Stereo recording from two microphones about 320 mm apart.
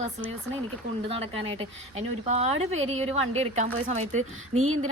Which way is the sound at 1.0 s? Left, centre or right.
Centre.